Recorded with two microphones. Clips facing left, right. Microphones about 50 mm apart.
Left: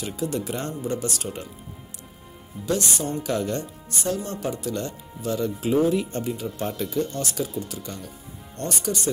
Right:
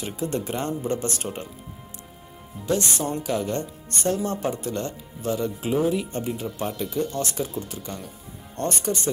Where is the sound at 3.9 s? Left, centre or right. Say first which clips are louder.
Right 2 dB; right.